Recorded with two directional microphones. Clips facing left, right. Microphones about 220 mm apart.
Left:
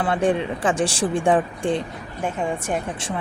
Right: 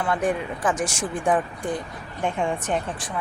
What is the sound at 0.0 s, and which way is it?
Speech, 30° left (ahead or behind).